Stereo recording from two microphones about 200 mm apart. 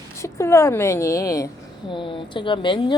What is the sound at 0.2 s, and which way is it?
A woman's voice, 15° left (ahead or behind).